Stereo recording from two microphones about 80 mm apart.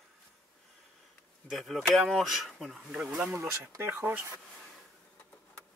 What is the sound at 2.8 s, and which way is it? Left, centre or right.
Speech, centre.